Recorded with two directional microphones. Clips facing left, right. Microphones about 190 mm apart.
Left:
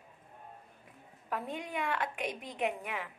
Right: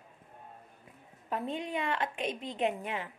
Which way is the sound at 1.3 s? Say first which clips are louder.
Right 3 dB; 20° right (ahead or behind).